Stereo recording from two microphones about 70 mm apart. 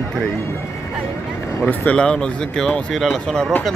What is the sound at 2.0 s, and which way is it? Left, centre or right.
Speech, centre.